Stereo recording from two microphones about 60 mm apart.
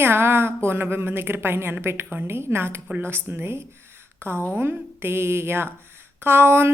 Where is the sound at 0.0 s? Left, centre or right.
Right.